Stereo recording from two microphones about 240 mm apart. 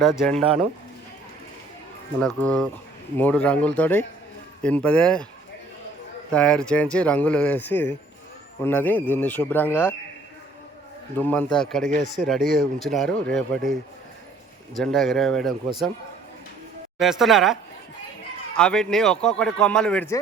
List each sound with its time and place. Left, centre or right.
0.2 s a man's voice: centre
2.2 s a man's voice: centre
6.3 s a man's voice: centre
11.2 s a man's voice: centre
12.4 s speech: right
12.8 s a man's voice: centre
14.8 s a man's voice: centre
17.0 s a man's voice: centre